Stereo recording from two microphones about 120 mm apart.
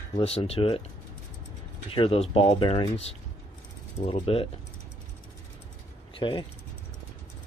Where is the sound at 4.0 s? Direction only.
90° left.